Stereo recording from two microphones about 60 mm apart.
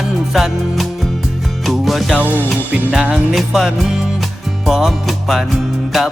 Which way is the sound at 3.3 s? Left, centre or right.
Centre.